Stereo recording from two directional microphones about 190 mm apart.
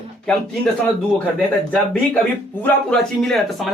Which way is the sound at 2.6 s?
5° left (ahead or behind).